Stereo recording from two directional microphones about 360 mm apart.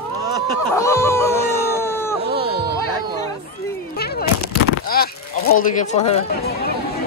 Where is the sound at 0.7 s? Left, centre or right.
Centre.